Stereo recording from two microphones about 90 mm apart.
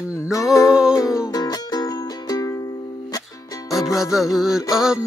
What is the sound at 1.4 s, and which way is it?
Music, 50° left (ahead or behind).